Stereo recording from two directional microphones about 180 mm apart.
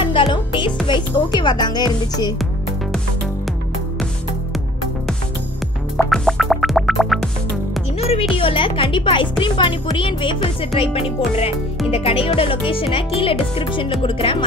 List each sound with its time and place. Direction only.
0.0 s music: 30° left (ahead or behind)
0.8 s speech: 25° left (ahead or behind)
6.0 s music: centre (ahead or behind)
8.0 s music: 35° left (ahead or behind)
9.4 s speech: 25° left (ahead or behind)